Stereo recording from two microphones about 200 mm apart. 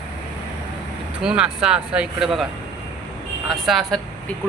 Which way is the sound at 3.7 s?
Centre (ahead or behind).